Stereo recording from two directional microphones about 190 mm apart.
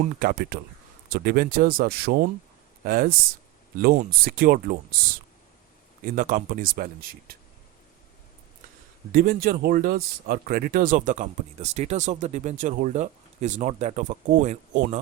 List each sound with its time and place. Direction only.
0.2 s speech: 50° right (ahead or behind)
6.1 s speech: 45° right (ahead or behind)
9.1 s speech: 50° right (ahead or behind)